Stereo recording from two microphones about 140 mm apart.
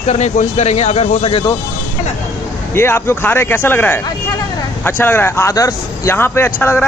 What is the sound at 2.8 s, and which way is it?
A man's voice, 15° left (ahead or behind).